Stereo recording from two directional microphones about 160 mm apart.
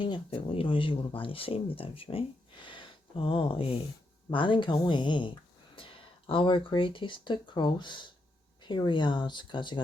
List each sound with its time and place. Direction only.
0.0 s speech: 35° left (ahead or behind)